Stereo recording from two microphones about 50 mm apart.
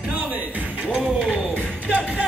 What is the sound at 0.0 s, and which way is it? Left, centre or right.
Music, right.